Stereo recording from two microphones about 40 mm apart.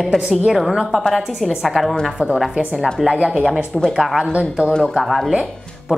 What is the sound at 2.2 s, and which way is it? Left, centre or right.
Speech, right.